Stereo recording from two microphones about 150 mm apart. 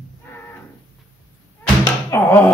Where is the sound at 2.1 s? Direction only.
15° left (ahead or behind).